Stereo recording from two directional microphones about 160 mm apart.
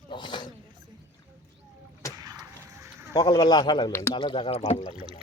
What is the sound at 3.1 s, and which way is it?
Speech, 25° left (ahead or behind).